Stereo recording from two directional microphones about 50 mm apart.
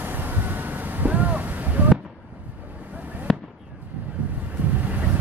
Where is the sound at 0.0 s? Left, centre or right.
Right.